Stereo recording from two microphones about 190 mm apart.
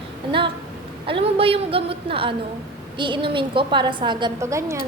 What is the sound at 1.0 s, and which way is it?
A woman's voice, 30° right (ahead or behind).